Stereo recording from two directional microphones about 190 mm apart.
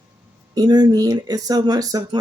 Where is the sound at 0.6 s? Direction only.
20° right (ahead or behind).